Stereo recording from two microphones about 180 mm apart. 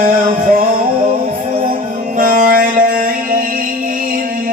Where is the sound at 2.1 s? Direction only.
50° right (ahead or behind).